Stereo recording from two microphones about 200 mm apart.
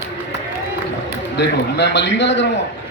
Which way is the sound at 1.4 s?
60° left (ahead or behind).